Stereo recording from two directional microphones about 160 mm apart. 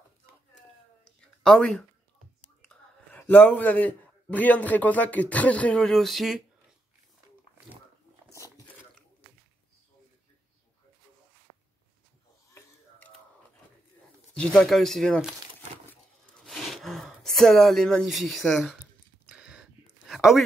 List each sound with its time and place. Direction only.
1.2 s a sound: 5° left (ahead or behind)
2.6 s a man's voice: 10° left (ahead or behind)
8.3 s biting: 20° left (ahead or behind)
14.3 s speech: 5° left (ahead or behind)
16.3 s gasp: centre (ahead or behind)
19.2 s a sound: 5° right (ahead or behind)